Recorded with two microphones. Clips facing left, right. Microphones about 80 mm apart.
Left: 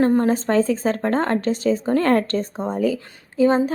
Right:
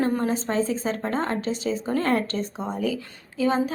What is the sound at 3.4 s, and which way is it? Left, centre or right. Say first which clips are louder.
Speech: left 6 dB; left.